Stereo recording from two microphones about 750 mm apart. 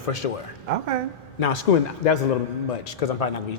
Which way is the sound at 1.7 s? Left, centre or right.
Left.